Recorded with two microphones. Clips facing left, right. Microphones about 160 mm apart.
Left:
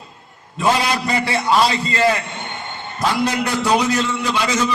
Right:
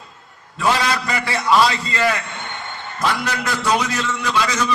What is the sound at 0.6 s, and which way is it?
A man's voice, 25° left (ahead or behind).